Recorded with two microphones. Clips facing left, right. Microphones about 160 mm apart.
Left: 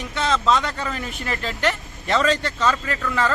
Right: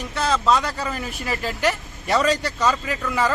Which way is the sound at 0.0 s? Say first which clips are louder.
Even; centre (ahead or behind).